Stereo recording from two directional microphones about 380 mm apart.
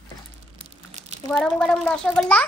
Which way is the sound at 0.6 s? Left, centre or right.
Centre.